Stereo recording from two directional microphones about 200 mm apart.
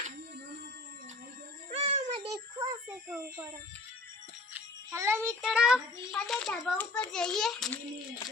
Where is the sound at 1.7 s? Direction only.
25° right (ahead or behind).